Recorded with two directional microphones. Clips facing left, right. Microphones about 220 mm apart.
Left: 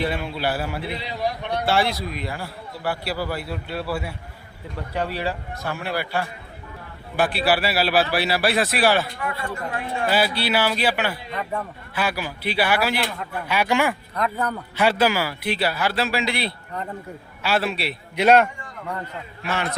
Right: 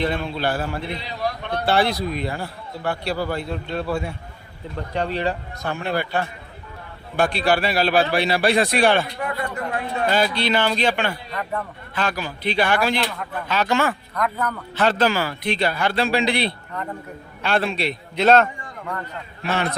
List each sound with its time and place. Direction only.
0.0 s speech: 10° left (ahead or behind)
1.6 s a man's voice: centre (ahead or behind)
10.1 s speech: 5° left (ahead or behind)
14.2 s a man's voice: 30° left (ahead or behind)
14.8 s a man's voice: 10° left (ahead or behind)
19.4 s a man's voice: 35° right (ahead or behind)